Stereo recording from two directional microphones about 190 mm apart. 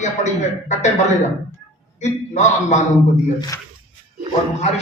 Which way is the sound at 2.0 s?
40° left (ahead or behind).